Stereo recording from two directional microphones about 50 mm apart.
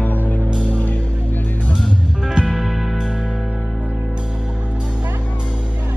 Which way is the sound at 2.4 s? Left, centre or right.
Centre.